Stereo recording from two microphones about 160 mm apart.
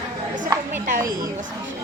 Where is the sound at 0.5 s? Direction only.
20° right (ahead or behind).